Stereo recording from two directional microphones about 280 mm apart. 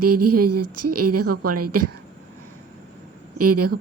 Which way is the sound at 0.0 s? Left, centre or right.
Right.